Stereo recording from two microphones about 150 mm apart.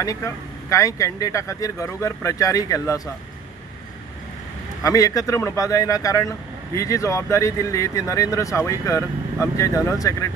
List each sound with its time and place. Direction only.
0.0 s speech: 20° left (ahead or behind)
4.8 s speech: 25° left (ahead or behind)